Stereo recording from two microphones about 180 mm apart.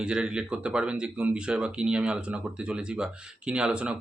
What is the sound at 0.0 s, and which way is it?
Speech, 5° right (ahead or behind).